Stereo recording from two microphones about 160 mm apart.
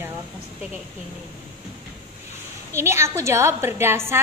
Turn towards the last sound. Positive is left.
turn(degrees=-15)  # may be behind; listen again after turning